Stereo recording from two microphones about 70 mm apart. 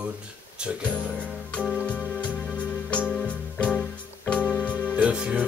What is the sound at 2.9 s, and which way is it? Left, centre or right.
Music, centre.